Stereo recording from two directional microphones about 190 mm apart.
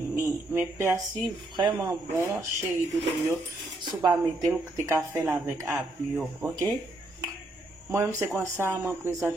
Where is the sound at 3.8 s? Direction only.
25° right (ahead or behind).